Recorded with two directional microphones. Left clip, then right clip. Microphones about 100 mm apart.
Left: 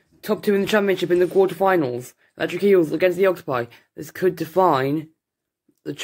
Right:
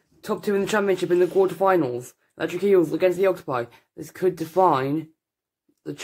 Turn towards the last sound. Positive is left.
turn(degrees=30)  # may be behind; listen again after turning